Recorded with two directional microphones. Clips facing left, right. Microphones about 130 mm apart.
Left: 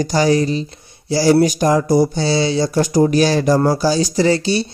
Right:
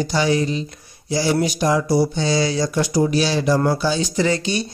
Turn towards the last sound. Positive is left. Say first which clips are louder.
# left 4 dB
turn(degrees=30)  # may be behind; listen again after turning